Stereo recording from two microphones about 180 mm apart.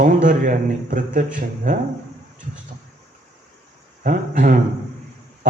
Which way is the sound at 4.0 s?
45° right (ahead or behind).